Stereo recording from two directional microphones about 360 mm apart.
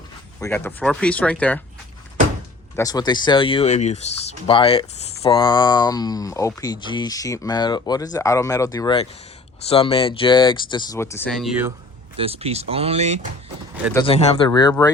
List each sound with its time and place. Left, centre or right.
0.3 s speech: centre
2.7 s speech: centre
12.1 s speech: centre
13.9 s speech: centre